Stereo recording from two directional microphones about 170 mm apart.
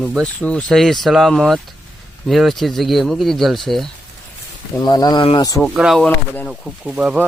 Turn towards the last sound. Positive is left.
turn(degrees=-5)  # may be behind; listen again after turning